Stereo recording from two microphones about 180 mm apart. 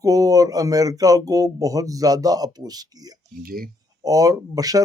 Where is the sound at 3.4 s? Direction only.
55° right (ahead or behind).